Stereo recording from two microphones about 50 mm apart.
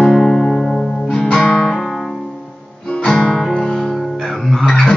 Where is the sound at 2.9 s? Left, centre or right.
Centre.